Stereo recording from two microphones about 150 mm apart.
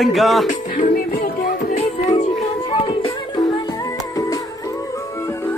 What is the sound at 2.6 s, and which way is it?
Music, 35° left (ahead or behind).